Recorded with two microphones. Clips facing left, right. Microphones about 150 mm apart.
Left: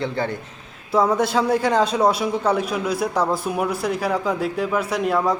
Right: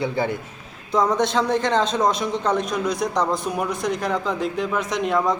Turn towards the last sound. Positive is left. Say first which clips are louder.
# left 1 dB
turn(degrees=5)  # may be behind; listen again after turning